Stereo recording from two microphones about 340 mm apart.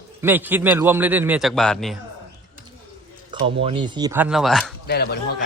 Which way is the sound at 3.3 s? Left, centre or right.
Centre.